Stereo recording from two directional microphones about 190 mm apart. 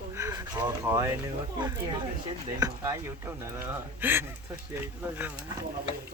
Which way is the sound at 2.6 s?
20° right (ahead or behind).